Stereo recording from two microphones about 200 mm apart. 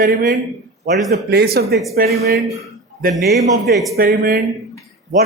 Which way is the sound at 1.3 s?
50° right (ahead or behind).